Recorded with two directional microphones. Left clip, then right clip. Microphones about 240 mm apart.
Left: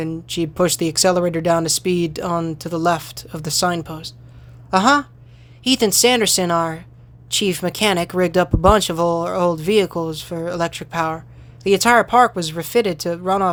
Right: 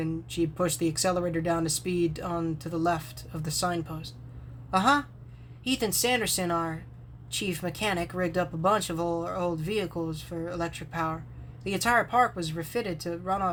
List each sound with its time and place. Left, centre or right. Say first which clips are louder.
0.0 s speech: left 7 dB; left